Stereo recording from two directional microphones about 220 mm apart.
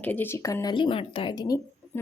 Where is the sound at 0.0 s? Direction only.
10° left (ahead or behind).